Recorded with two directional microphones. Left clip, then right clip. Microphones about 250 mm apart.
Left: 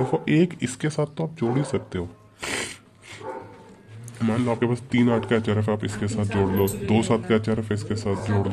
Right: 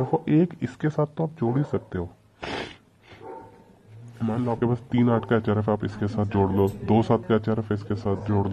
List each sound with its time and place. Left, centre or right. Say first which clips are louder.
0.1 s speech: left 1 dB; centre
4.2 s speech: left 2 dB; centre